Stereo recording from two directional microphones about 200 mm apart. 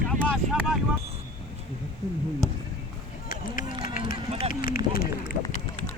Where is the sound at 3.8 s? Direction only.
45° left (ahead or behind).